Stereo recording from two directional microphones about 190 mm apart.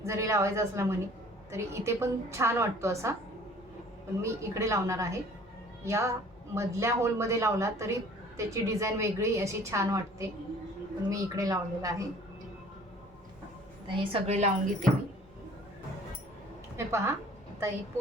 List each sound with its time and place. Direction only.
0.0 s speech: 15° right (ahead or behind)
4.2 s speech: 15° right (ahead or behind)
13.8 s a woman's voice: 25° right (ahead or behind)
16.7 s a woman's voice: 15° right (ahead or behind)